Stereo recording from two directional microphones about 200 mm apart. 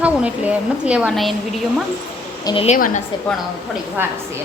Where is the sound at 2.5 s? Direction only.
25° left (ahead or behind).